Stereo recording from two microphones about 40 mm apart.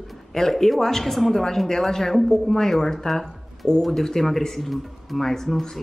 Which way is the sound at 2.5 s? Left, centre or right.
Centre.